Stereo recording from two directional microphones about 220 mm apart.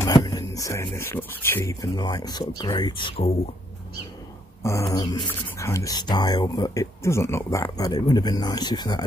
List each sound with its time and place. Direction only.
0.0 s speech: 15° left (ahead or behind)
4.8 s speech: 20° left (ahead or behind)